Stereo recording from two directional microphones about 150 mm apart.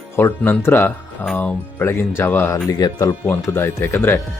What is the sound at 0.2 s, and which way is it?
Speech, 15° left (ahead or behind).